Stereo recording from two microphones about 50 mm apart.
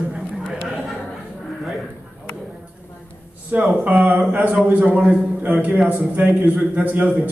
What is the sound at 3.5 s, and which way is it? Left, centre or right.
A man's voice, right.